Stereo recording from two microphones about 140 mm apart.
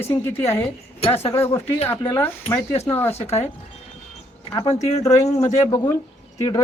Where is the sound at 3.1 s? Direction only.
50° left (ahead or behind).